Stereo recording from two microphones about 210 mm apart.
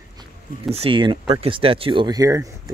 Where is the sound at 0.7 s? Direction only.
25° right (ahead or behind).